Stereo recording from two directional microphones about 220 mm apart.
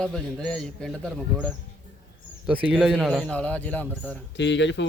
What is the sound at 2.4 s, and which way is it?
A man's voice, 5° right (ahead or behind).